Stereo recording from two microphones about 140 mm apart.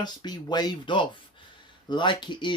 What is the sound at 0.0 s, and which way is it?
Speech, 30° left (ahead or behind).